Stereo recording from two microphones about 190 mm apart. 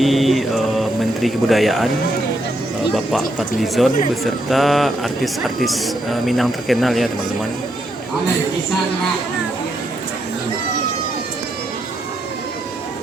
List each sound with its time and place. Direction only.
0.0 s speech: centre (ahead or behind)
2.9 s speech: centre (ahead or behind)